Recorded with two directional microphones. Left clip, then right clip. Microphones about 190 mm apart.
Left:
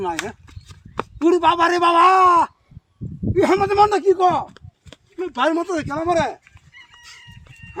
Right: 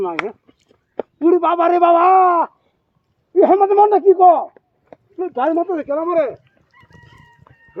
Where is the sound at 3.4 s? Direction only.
25° left (ahead or behind).